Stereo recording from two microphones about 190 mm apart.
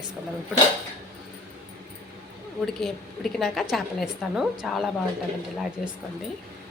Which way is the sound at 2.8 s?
Centre (ahead or behind).